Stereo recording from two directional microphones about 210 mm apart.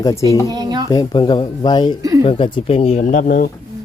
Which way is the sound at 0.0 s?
15° left (ahead or behind).